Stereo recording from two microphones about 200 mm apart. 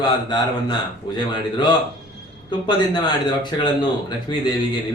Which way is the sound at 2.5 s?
25° left (ahead or behind).